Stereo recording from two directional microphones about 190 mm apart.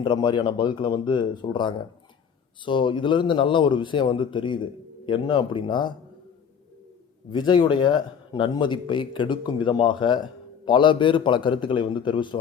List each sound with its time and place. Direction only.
0.0 s speech: 25° left (ahead or behind)
7.3 s speech: 25° left (ahead or behind)